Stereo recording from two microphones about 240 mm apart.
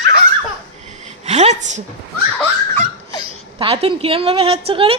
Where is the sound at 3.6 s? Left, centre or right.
Right.